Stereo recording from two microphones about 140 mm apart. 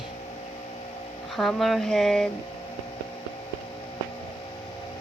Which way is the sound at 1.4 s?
Centre (ahead or behind).